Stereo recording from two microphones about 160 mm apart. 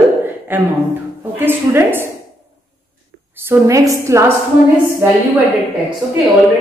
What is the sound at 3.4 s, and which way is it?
Speech, 20° right (ahead or behind).